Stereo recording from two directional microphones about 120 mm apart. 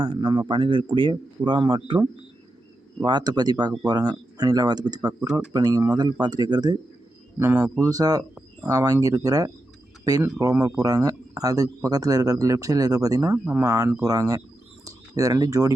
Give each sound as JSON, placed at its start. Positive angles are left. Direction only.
{"t": 0.0, "sound": "speech", "side_deg": -40}
{"t": 7.3, "sound": "speech", "side_deg": -15}
{"t": 7.8, "sound": "speech", "side_deg": -30}
{"t": 13.4, "sound": "speech", "side_deg": -20}